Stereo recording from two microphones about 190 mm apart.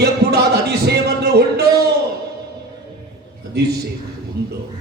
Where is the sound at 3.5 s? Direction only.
60° right (ahead or behind).